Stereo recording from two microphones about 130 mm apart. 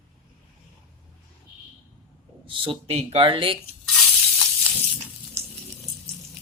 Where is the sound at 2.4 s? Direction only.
40° right (ahead or behind).